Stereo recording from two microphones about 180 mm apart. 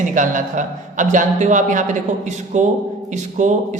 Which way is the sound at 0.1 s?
45° right (ahead or behind).